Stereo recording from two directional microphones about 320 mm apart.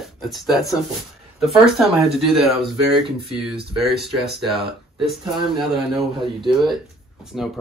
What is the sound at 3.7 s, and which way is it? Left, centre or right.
Speech, centre.